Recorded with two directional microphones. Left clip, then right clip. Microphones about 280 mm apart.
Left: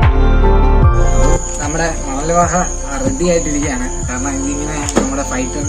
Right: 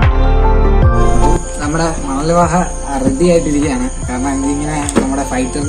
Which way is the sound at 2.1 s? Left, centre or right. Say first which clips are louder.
Right 1 dB; centre.